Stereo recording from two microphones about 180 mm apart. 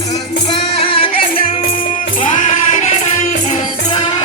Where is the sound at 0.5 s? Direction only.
30° left (ahead or behind).